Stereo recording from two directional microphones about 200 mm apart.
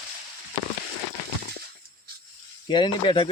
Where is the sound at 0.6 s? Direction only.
20° left (ahead or behind).